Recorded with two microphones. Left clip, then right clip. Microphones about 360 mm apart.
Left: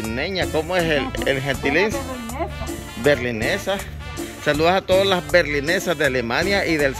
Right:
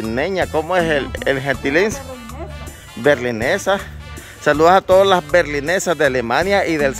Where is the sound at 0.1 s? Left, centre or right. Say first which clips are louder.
Right 4 dB; centre.